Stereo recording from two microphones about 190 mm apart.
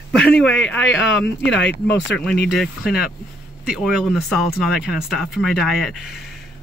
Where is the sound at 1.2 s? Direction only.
65° left (ahead or behind).